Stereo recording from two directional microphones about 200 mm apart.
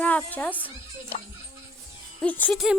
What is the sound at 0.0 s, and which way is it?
Speech, 10° left (ahead or behind).